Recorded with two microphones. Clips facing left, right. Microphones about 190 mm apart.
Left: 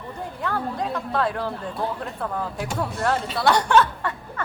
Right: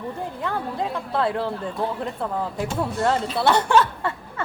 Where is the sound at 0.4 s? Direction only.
25° right (ahead or behind).